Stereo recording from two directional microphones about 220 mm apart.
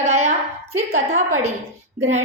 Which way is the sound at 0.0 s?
30° right (ahead or behind).